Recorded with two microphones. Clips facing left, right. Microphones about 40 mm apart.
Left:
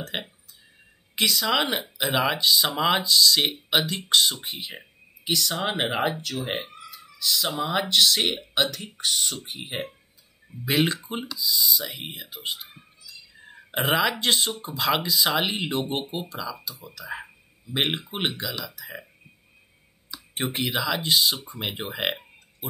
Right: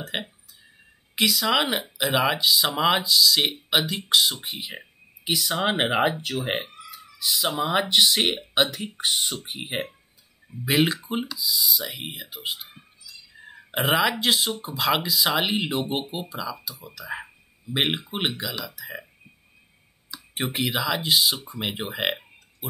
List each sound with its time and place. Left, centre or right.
0.0 s speech: centre
10.6 s speech: centre
20.1 s speech: centre